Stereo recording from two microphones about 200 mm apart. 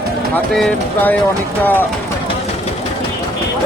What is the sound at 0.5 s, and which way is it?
Speech, 5° left (ahead or behind).